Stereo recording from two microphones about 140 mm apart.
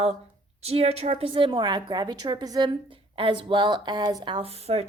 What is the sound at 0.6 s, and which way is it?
A woman's voice, 45° right (ahead or behind).